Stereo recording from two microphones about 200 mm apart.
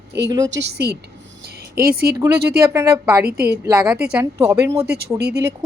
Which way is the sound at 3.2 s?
50° right (ahead or behind).